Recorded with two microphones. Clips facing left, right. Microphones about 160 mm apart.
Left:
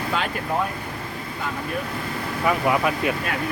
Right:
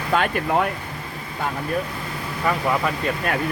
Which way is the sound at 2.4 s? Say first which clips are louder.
Left 1 dB; 10° left (ahead or behind).